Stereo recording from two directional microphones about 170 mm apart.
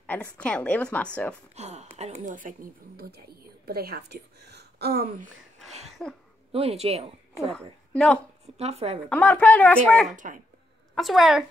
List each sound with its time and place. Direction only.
0.0 s a woman's voice: 10° left (ahead or behind)
1.5 s a sound: 40° right (ahead or behind)
2.0 s a woman's voice: 40° right (ahead or behind); by 5.3 s 65° right (ahead or behind)
5.7 s a sound: 40° right (ahead or behind)
6.5 s speech: 35° right (ahead or behind)
7.9 s a woman's voice: 5° left (ahead or behind)
8.5 s speech: 40° right (ahead or behind)
9.1 s a woman's voice: 10° left (ahead or behind)
10.1 s speech: 50° right (ahead or behind)
11.0 s a woman's voice: centre (ahead or behind)